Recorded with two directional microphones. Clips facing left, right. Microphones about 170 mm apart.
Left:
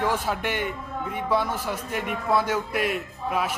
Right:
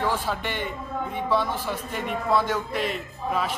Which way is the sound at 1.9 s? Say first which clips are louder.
Even; 5° left (ahead or behind).